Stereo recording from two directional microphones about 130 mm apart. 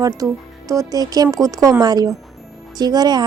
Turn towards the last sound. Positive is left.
turn(degrees=-30)  # may be behind; listen again after turning